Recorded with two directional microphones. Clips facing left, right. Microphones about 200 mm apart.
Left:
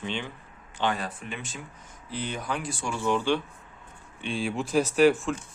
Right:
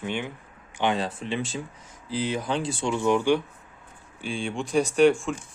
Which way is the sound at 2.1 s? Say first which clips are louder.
Right 6 dB; 90° right.